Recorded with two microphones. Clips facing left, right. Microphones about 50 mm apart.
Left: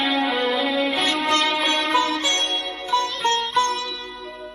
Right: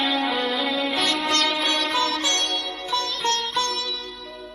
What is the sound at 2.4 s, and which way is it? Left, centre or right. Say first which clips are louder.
Music: left 1 dB; left.